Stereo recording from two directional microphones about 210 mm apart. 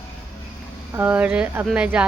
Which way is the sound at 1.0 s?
5° right (ahead or behind).